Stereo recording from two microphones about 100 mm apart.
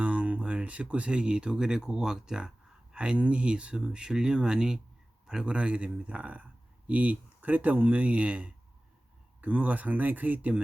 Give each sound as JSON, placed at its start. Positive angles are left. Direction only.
{"t": 0.0, "sound": "a man's voice", "side_deg": -15}